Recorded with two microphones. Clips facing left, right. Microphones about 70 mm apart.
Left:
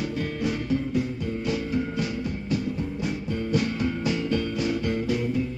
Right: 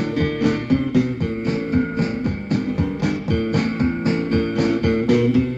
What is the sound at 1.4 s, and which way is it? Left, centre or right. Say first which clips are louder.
Music: right 6 dB; right.